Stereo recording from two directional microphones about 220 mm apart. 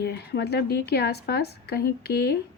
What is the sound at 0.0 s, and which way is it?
A woman's voice, 45° left (ahead or behind).